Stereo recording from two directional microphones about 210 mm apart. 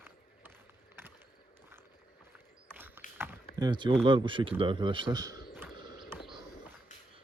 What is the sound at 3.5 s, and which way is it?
Speech, 20° right (ahead or behind).